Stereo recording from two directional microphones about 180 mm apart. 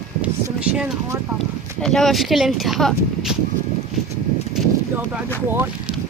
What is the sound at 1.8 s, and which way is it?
Speech, centre (ahead or behind).